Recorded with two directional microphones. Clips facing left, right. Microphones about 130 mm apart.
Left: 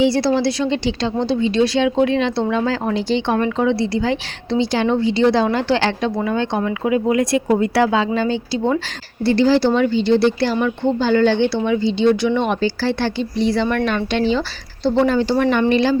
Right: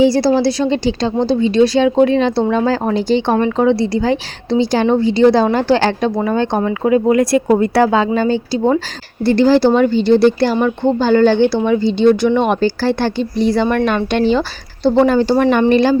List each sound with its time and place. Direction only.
0.0 s a woman's voice: 40° right (ahead or behind)